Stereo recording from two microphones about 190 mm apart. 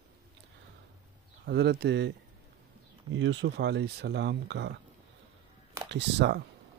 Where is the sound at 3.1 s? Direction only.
75° right (ahead or behind).